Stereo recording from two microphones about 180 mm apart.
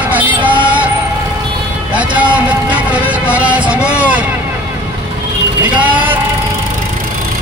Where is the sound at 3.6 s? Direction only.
5° right (ahead or behind).